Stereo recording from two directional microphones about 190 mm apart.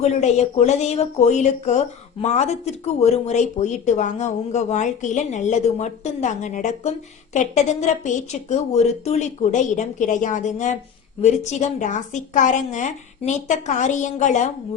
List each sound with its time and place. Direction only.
0.0 s speech: 35° left (ahead or behind)